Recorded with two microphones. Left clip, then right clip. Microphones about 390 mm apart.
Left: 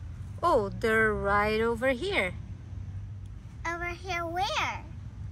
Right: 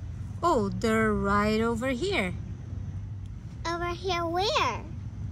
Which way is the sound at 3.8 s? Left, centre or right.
Centre.